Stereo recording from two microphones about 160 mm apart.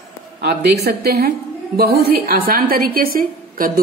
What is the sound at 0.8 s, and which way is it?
A woman's voice, 75° right (ahead or behind).